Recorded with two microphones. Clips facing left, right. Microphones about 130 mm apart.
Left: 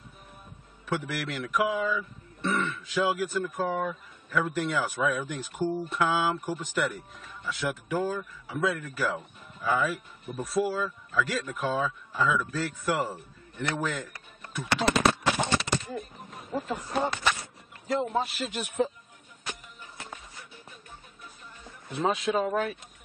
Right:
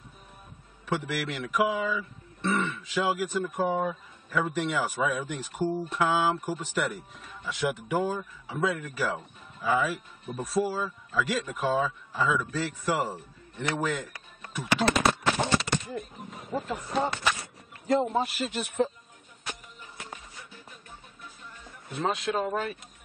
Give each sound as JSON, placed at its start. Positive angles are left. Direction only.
{"t": 0.8, "sound": "speech", "side_deg": -5}
{"t": 3.6, "sound": "speech", "side_deg": -20}
{"t": 4.3, "sound": "speech", "side_deg": -5}
{"t": 14.5, "sound": "a sound", "side_deg": -5}
{"t": 16.0, "sound": "speech", "side_deg": 0}
{"t": 21.9, "sound": "speech", "side_deg": 0}